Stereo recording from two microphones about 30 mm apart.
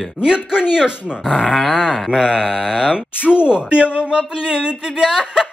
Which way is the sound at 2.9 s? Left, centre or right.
Right.